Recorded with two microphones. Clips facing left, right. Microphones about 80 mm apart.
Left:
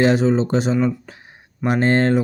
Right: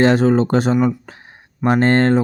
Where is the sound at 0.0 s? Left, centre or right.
Right.